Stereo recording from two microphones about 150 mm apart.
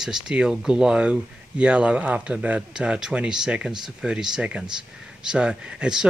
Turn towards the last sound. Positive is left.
turn(degrees=-5)  # may be behind; listen again after turning